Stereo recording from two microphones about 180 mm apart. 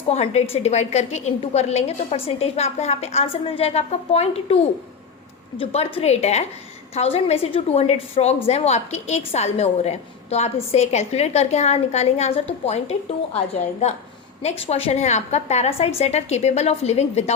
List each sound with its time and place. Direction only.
0.1 s a woman's voice: 35° left (ahead or behind)